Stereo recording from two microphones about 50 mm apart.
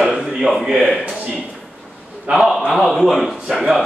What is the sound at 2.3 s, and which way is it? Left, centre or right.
A man's voice, centre.